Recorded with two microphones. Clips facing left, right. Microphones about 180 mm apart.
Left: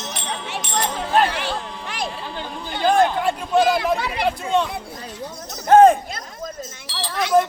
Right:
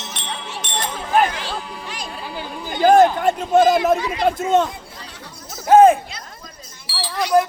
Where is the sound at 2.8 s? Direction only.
40° right (ahead or behind).